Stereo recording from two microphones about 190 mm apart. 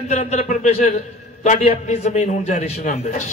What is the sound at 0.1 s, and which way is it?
A man's voice, 35° left (ahead or behind).